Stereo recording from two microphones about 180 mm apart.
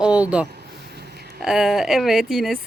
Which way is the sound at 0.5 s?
65° right (ahead or behind).